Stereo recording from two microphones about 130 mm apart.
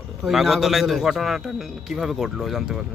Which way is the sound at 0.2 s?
Centre (ahead or behind).